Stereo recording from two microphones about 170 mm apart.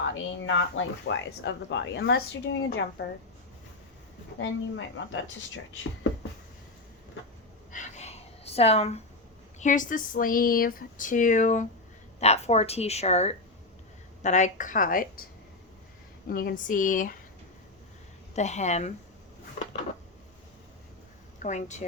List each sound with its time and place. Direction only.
0.4 s speech: 90° left; by 3.1 s 70° left (ahead or behind)
4.4 s speech: 90° left
7.7 s a sound: 45° left (ahead or behind)
9.6 s speech: 50° left (ahead or behind)
16.3 s speech: 60° left (ahead or behind)
18.3 s speech: 40° left (ahead or behind)
21.3 s a woman's voice: 45° left (ahead or behind)